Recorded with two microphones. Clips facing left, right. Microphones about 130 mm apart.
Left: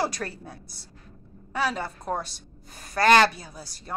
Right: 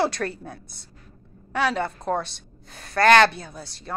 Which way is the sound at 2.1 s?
10° left (ahead or behind).